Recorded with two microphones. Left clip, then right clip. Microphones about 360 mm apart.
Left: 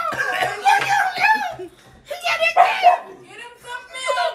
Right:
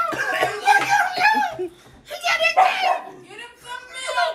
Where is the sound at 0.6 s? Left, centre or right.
Left.